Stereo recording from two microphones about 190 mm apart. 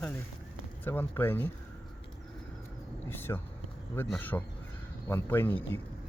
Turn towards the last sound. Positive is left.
turn(degrees=10)  # may be behind; listen again after turning